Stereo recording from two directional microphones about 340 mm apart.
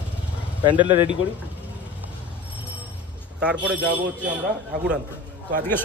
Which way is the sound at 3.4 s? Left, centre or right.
Centre.